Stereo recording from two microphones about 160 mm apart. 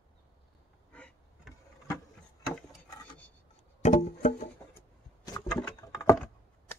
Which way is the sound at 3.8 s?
50° left (ahead or behind).